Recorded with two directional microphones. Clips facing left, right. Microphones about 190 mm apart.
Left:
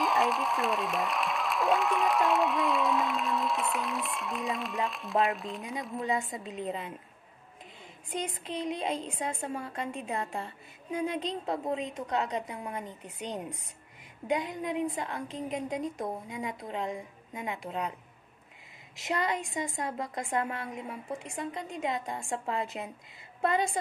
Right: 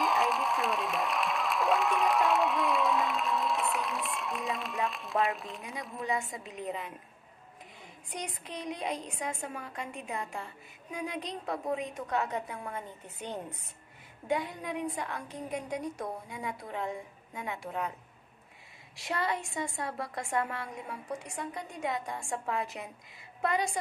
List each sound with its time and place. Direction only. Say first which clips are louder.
0.0 s speech: left 1 dB; centre (ahead or behind)
6.0 s a woman's voice: left 1 dB; 25° left (ahead or behind)
8.1 s a woman's voice: left 5 dB; 25° left (ahead or behind)
18.9 s a woman's voice: left 2 dB; 20° left (ahead or behind)